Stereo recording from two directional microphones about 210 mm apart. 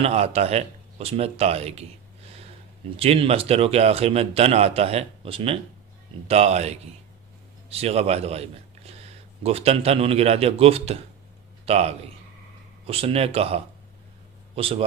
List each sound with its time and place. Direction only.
0.0 s a man's voice: 30° right (ahead or behind)
3.0 s a man's voice: 30° right (ahead or behind)